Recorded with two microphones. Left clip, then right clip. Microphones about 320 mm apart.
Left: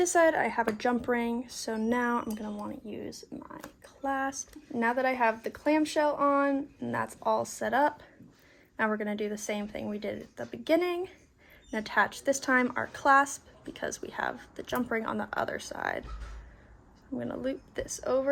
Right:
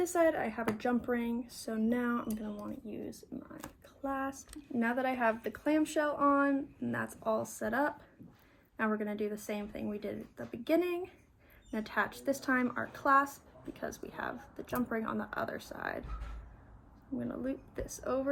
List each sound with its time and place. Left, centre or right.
0.0 s a woman's voice: left
4.0 s a woman's voice: left
17.2 s a woman's voice: left